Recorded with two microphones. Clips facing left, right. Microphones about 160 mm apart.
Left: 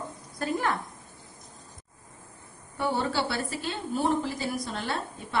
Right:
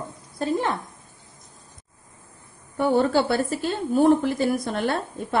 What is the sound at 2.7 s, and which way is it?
A woman's voice, 50° right (ahead or behind).